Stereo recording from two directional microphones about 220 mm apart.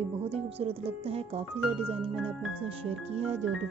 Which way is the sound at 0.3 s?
25° right (ahead or behind).